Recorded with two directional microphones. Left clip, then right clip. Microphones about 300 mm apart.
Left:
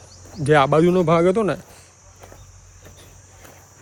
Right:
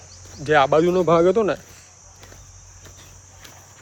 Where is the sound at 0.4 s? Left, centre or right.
Centre.